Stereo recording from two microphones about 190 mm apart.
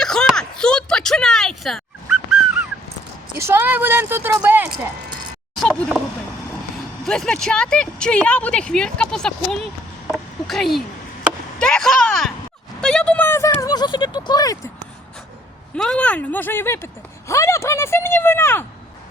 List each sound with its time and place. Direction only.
0.0 s a sound: 5° left (ahead or behind)
3.3 s speech: 10° right (ahead or behind)
5.5 s speech: centre (ahead or behind)
7.0 s speech: 5° left (ahead or behind)
10.1 s a sound: centre (ahead or behind); by 14.6 s 20° left (ahead or behind)
15.7 s speech: 5° left (ahead or behind)